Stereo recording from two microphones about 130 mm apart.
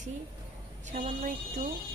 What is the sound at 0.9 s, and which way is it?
Speech, 65° right (ahead or behind).